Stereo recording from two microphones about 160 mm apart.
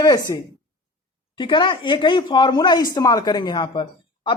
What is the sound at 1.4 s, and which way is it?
Speech, 30° left (ahead or behind).